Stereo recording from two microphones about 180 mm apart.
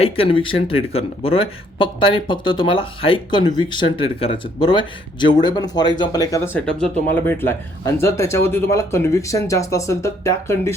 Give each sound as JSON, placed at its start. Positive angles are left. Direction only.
{"t": 0.0, "sound": "speech", "side_deg": 30}